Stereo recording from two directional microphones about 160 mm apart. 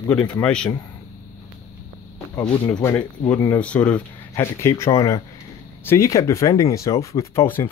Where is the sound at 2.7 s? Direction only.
15° left (ahead or behind).